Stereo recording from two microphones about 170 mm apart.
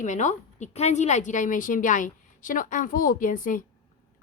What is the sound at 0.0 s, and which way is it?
A woman's voice, 45° left (ahead or behind).